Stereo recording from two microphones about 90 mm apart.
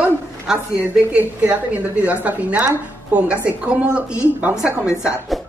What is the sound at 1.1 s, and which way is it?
A woman's voice, 15° right (ahead or behind).